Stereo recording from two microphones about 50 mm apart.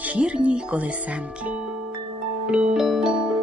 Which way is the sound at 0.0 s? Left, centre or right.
Right.